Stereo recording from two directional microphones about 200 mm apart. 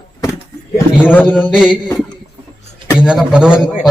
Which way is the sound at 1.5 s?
5° right (ahead or behind).